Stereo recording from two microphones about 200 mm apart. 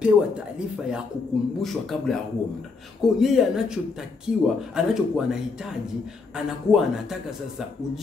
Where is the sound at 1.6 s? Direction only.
Centre (ahead or behind).